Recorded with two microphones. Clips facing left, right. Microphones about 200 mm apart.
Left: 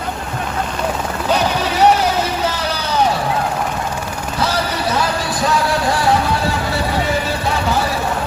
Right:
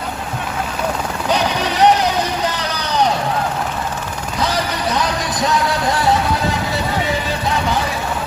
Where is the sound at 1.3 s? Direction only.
15° right (ahead or behind).